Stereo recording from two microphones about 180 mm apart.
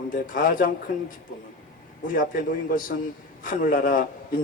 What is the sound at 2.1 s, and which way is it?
Speech, 50° left (ahead or behind).